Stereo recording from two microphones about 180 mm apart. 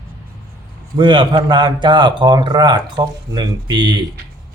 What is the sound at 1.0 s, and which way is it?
A man's voice, 25° right (ahead or behind).